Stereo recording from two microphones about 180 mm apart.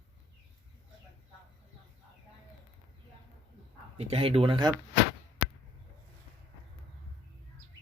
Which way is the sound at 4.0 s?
35° right (ahead or behind).